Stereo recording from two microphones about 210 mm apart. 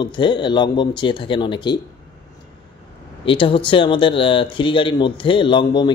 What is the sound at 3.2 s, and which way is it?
Speech, 25° left (ahead or behind).